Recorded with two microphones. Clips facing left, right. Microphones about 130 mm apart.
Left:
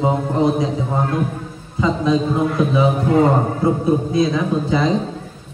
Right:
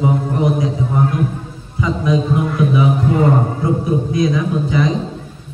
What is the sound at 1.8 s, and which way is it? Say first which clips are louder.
A man's voice: even; 25° left (ahead or behind).